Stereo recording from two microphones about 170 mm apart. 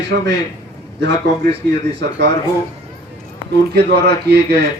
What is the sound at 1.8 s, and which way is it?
Speech, 90° right.